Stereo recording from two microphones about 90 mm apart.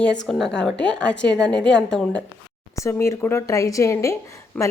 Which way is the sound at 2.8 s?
30° left (ahead or behind).